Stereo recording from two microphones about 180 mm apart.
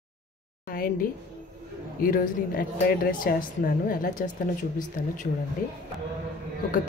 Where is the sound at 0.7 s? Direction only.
50° left (ahead or behind).